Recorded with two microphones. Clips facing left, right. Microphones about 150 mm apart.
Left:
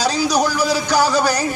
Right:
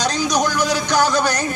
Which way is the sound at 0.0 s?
10° left (ahead or behind).